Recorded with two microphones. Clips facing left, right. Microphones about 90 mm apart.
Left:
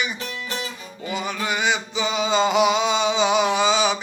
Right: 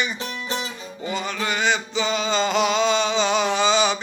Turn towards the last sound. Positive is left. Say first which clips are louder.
# even
turn(degrees=5)  # may be behind; listen again after turning